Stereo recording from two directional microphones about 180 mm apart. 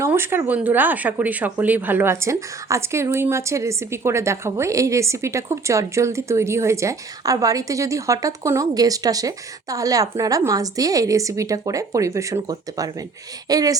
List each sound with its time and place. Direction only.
0.0 s speech: 15° right (ahead or behind)